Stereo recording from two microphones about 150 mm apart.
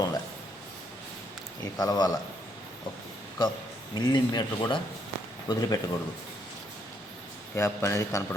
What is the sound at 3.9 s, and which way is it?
Speech, 30° left (ahead or behind).